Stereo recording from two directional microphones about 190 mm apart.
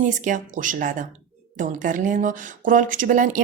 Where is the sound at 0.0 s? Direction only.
40° right (ahead or behind).